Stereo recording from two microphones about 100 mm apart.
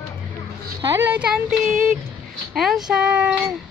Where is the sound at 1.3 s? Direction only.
5° right (ahead or behind).